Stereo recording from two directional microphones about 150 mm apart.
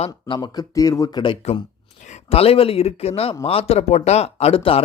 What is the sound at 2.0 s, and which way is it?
Speech, 45° left (ahead or behind).